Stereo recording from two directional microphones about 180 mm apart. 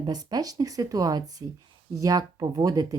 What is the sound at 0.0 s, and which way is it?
Speech, 20° right (ahead or behind).